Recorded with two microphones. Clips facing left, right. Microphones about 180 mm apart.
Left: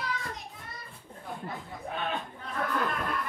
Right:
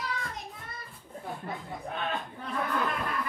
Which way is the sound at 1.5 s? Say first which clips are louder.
Right 1 dB; centre (ahead or behind).